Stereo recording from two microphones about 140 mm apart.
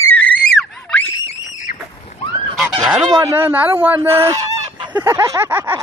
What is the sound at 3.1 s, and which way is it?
A man's voice, 25° right (ahead or behind).